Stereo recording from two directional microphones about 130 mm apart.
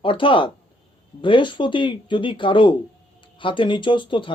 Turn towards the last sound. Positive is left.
turn(degrees=40)  # may be behind; listen again after turning